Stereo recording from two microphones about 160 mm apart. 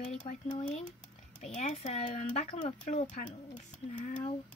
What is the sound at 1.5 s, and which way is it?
Speech, 45° left (ahead or behind).